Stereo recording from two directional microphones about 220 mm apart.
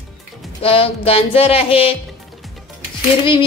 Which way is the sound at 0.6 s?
25° left (ahead or behind).